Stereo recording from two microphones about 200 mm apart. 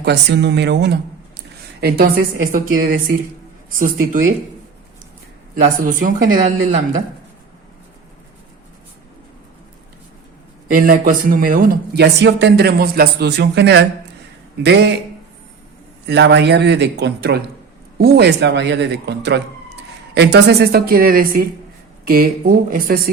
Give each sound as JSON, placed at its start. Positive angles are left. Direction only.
{"t": 0.0, "sound": "speech", "side_deg": -55}
{"t": 5.7, "sound": "speech", "side_deg": -40}
{"t": 10.7, "sound": "speech", "side_deg": -45}
{"t": 16.0, "sound": "speech", "side_deg": -60}